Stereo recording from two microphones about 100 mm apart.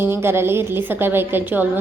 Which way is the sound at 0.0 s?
25° right (ahead or behind).